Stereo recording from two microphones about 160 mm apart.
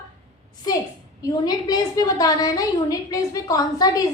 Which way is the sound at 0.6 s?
25° left (ahead or behind).